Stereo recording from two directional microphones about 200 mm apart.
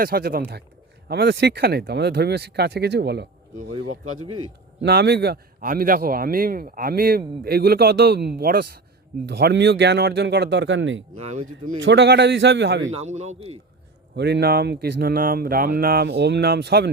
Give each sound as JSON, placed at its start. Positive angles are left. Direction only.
{"t": 0.0, "sound": "a man's voice", "side_deg": -50}
{"t": 3.8, "sound": "a man's voice", "side_deg": -90}
{"t": 4.9, "sound": "a man's voice", "side_deg": -55}
{"t": 11.2, "sound": "a man's voice", "side_deg": -35}
{"t": 11.8, "sound": "speech", "side_deg": -60}
{"t": 12.9, "sound": "a man's voice", "side_deg": -35}
{"t": 14.2, "sound": "a man's voice", "side_deg": -55}